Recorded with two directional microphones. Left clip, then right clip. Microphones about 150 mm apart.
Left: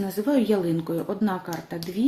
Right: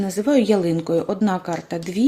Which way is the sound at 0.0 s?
40° right (ahead or behind).